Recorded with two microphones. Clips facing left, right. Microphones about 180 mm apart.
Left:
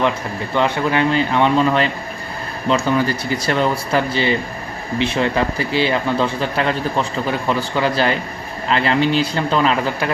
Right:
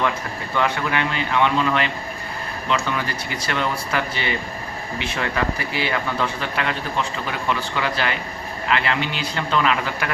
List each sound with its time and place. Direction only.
0.5 s speech: 30° left (ahead or behind)